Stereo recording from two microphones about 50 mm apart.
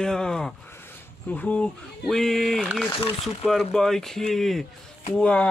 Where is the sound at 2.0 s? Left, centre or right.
Centre.